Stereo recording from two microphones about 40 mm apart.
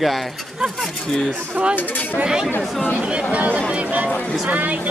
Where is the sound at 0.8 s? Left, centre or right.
Centre.